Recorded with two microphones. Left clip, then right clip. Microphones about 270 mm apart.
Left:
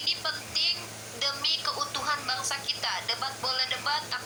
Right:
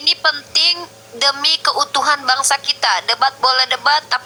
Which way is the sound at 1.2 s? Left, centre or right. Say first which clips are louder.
Right 13 dB; right.